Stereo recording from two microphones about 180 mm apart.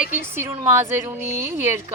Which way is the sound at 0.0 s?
10° right (ahead or behind).